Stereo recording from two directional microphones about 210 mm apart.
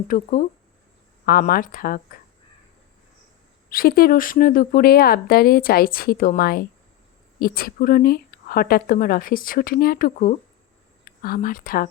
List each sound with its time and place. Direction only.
0.1 s speech: 40° left (ahead or behind)
3.7 s speech: 45° left (ahead or behind)